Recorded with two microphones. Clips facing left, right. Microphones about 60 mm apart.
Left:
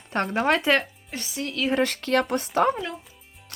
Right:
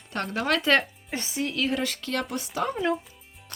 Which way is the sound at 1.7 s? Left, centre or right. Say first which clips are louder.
Left 6 dB; left.